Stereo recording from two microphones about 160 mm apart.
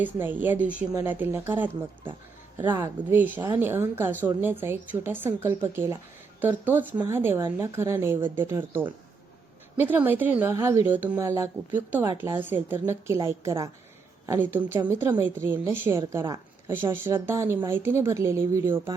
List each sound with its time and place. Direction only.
0.0 s speech: 10° right (ahead or behind)
2.7 s speech: 15° right (ahead or behind)